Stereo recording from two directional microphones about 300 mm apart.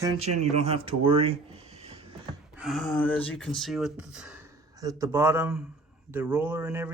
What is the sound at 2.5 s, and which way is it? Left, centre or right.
Speech, centre.